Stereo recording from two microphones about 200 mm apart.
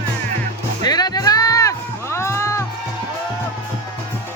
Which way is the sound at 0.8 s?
20° left (ahead or behind).